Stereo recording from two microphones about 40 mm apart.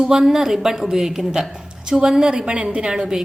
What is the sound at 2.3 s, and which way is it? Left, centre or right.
Speech, right.